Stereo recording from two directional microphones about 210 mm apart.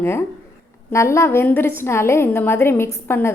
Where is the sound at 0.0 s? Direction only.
10° left (ahead or behind).